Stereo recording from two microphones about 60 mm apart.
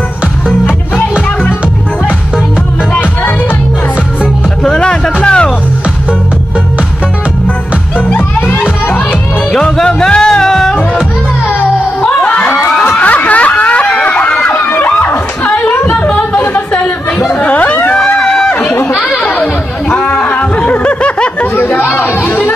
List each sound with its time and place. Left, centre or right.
2.9 s music: left
4.6 s music: centre
8.1 s music: left
9.5 s music: centre
12.0 s a sound: centre; by 15.1 s left
15.4 s a sound: left
17.3 s chatter: left
18.2 s run: centre
19.0 s chatter: centre
19.9 s snicker: centre
21.5 s chatter: left